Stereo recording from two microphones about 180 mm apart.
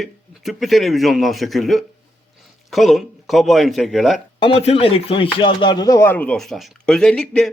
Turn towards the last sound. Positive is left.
turn(degrees=5)  # may be behind; listen again after turning